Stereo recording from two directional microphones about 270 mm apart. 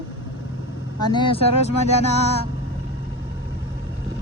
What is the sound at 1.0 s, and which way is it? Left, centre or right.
Speech, centre.